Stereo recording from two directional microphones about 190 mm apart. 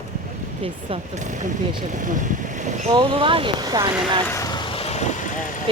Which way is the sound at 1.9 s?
40° right (ahead or behind).